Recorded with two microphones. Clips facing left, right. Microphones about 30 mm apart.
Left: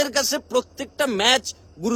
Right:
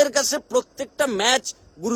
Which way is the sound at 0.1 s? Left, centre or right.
Centre.